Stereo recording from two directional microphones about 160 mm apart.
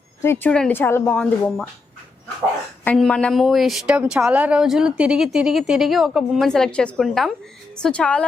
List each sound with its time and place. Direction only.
0.2 s a woman's voice: 15° left (ahead or behind)
2.8 s a woman's voice: 5° left (ahead or behind)